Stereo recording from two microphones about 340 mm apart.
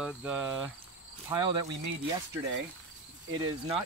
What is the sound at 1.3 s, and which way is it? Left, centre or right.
Speech, centre.